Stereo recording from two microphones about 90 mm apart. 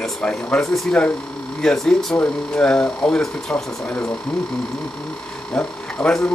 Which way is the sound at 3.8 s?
20° left (ahead or behind).